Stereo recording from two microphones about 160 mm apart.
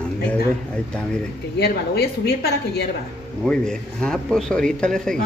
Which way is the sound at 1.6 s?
85° left.